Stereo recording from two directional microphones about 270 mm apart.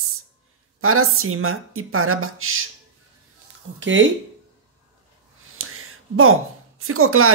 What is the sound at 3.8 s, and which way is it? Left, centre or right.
Speech, right.